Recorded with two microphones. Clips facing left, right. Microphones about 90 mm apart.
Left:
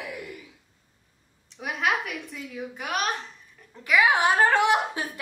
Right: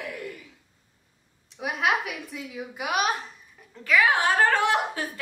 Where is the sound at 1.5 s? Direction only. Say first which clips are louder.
Right 1 dB; centre (ahead or behind).